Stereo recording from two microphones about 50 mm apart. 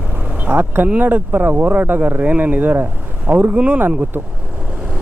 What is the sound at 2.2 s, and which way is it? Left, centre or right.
Speech, right.